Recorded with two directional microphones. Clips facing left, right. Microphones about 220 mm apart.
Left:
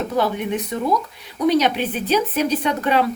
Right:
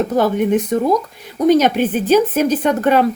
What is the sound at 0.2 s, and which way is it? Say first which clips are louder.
A woman's voice: right 6 dB; 45° right (ahead or behind).